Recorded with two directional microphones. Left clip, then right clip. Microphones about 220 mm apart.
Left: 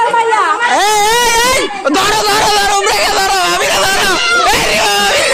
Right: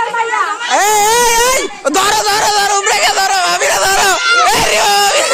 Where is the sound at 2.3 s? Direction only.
15° right (ahead or behind).